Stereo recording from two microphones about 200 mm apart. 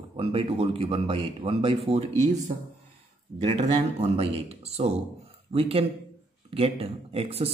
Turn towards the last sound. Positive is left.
turn(degrees=-30)  # may be behind; listen again after turning